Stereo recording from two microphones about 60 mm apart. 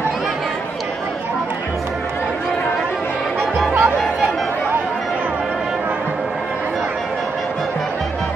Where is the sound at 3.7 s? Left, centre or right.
Right.